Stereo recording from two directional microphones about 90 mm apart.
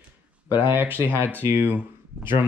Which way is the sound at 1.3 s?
20° right (ahead or behind).